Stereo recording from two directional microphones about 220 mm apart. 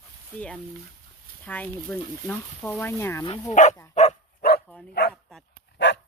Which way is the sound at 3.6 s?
35° left (ahead or behind).